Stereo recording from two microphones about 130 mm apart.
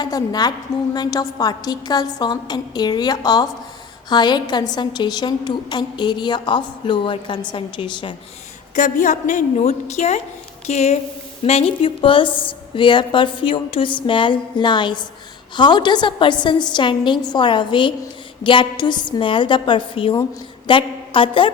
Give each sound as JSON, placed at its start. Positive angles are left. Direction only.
{"t": 0.0, "sound": "a woman's voice", "side_deg": 30}
{"t": 8.7, "sound": "a woman's voice", "side_deg": 75}